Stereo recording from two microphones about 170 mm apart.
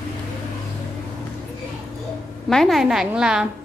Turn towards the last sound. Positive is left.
turn(degrees=-5)  # may be behind; listen again after turning